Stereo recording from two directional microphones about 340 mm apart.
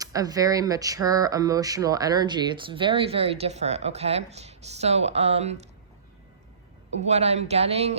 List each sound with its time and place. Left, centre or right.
0.0 s speech: centre
6.9 s speech: centre